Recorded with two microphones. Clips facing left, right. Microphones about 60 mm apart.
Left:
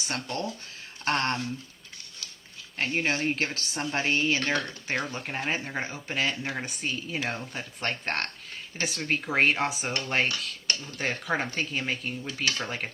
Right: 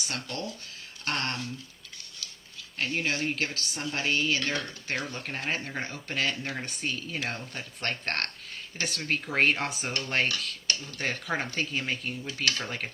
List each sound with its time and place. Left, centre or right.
0.0 s speech: left
2.7 s speech: left
4.9 s speech: centre